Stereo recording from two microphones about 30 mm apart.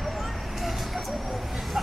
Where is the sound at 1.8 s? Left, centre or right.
Centre.